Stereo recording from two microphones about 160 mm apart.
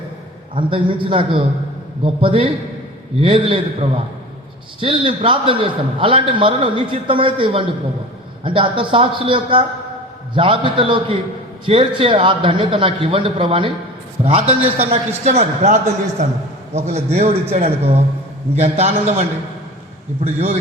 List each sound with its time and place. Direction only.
0.5 s a man's voice: 30° right (ahead or behind)
20.2 s a man's voice: 40° right (ahead or behind)